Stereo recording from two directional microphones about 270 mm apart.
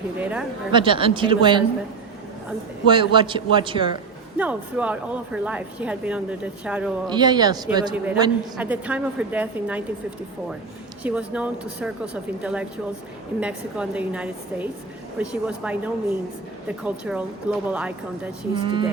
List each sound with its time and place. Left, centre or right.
0.2 s a man's voice: centre
0.7 s a man's voice: centre
2.8 s a man's voice: centre
4.4 s a man's voice: centre
7.1 s a man's voice: centre
11.0 s a man's voice: centre
18.5 s a man's voice: centre